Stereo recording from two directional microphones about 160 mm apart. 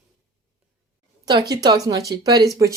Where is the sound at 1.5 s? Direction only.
25° right (ahead or behind).